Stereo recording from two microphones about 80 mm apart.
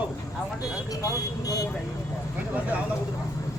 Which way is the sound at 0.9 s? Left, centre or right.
Left.